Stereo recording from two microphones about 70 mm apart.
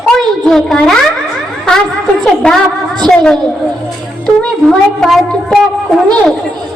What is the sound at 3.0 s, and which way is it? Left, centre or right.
Speech, centre.